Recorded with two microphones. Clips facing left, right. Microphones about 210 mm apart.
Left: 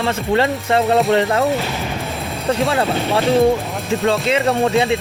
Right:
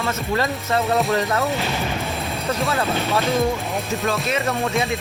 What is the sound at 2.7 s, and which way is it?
Speech, 30° left (ahead or behind).